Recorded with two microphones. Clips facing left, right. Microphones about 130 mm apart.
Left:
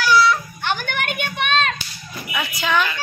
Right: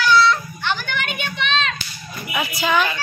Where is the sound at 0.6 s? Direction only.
50° left (ahead or behind).